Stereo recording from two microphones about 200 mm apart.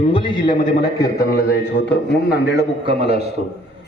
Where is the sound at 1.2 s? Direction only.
50° left (ahead or behind).